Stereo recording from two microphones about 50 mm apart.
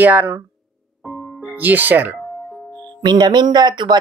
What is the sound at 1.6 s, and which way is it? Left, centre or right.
Speech, right.